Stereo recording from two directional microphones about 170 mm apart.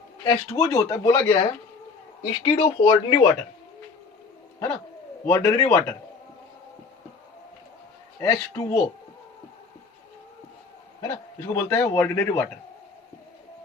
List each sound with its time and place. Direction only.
0.3 s speech: 20° left (ahead or behind)
2.4 s speech: 30° left (ahead or behind)
5.2 s speech: 20° left (ahead or behind)
8.2 s speech: 20° left (ahead or behind)
11.0 s a man's voice: 15° left (ahead or behind)